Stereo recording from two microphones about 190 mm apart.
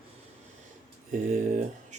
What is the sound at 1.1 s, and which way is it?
Speech, 35° right (ahead or behind).